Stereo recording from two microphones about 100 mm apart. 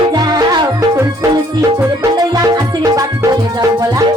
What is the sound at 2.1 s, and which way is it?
Music, 40° right (ahead or behind).